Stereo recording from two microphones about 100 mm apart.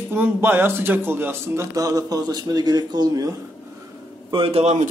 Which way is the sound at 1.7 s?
35° right (ahead or behind).